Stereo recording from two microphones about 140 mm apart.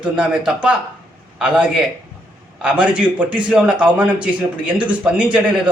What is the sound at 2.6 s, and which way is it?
Speech, 10° right (ahead or behind).